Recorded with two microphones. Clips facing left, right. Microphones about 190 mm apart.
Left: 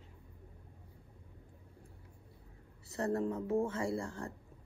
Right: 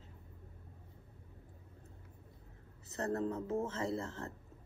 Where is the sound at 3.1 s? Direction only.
15° left (ahead or behind).